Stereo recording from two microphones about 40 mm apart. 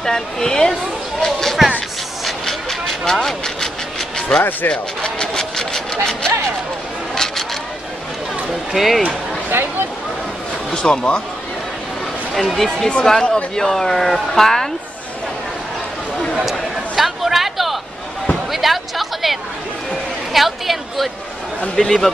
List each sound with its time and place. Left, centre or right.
0.0 s speech: centre
2.4 s vehicle: centre
4.4 s speech: left
4.6 s a sound: centre
8.7 s speech: centre
9.5 s a sound: right
10.7 s speech: centre
12.4 s speech: centre
16.4 s a sound: centre
20.3 s a woman's voice: centre
21.7 s speech: centre